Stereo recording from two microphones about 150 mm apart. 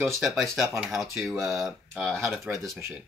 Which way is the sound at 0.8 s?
Centre (ahead or behind).